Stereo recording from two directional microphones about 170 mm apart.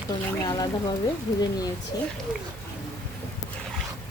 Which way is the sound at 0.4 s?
25° left (ahead or behind).